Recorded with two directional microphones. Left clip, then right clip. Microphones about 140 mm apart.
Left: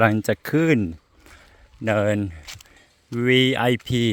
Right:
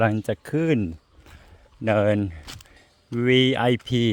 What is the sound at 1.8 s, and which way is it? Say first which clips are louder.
Speech: even; centre (ahead or behind).